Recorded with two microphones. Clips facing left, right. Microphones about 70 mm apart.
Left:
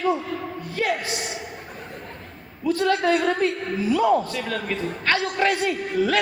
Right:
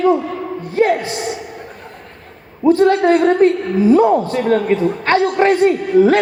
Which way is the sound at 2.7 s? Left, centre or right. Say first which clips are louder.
Right 9 dB; right.